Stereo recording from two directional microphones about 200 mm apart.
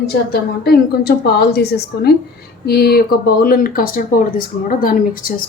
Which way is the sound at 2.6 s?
50° left (ahead or behind).